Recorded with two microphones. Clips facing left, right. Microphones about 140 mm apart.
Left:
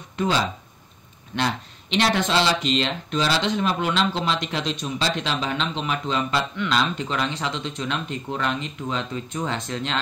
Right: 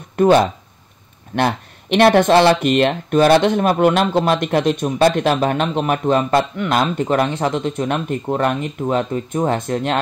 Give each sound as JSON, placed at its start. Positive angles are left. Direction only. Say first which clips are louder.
{"t": 0.1, "sound": "speech", "louder": "right 11 dB", "side_deg": -55}